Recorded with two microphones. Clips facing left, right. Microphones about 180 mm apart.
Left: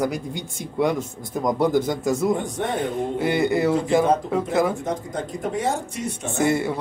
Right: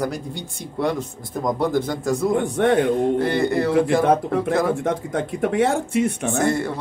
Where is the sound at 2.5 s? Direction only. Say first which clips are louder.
Right 7 dB; 70° right (ahead or behind).